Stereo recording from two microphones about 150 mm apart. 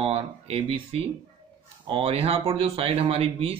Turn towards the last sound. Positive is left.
turn(degrees=-40)  # may be behind; listen again after turning